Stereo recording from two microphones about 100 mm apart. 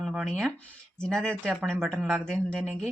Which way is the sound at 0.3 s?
5° left (ahead or behind).